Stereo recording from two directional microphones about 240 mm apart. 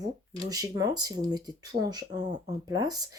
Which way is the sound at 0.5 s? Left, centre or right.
Centre.